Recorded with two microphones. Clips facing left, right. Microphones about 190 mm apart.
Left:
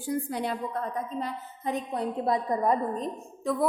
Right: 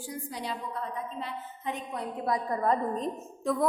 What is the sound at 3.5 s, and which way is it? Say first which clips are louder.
Speech: even; centre (ahead or behind).